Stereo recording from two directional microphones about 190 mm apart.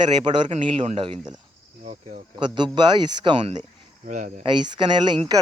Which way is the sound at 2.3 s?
25° right (ahead or behind).